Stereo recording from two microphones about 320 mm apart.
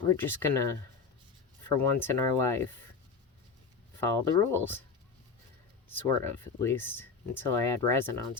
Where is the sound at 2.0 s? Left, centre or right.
Centre.